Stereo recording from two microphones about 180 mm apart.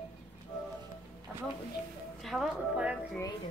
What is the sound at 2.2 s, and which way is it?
Speech, 5° right (ahead or behind).